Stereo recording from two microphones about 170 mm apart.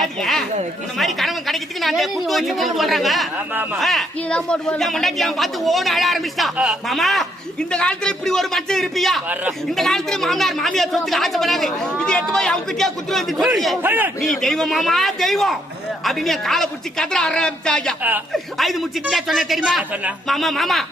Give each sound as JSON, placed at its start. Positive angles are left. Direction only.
{"t": 0.2, "sound": "a man's voice", "side_deg": 0}
{"t": 3.8, "sound": "speech", "side_deg": 5}
{"t": 9.3, "sound": "a man's voice", "side_deg": -10}
{"t": 9.7, "sound": "a man's voice", "side_deg": 0}
{"t": 14.2, "sound": "speech", "side_deg": 0}